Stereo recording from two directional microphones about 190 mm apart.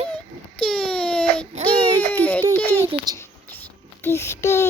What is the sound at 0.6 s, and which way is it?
Baby cry, 5° left (ahead or behind).